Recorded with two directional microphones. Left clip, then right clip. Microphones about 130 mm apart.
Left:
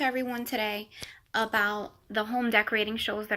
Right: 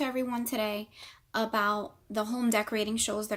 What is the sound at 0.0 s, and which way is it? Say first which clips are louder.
A woman's voice: left 3 dB; 25° right (ahead or behind).